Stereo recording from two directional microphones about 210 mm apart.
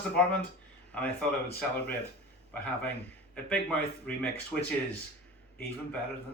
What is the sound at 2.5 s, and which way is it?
A man's voice, 5° left (ahead or behind).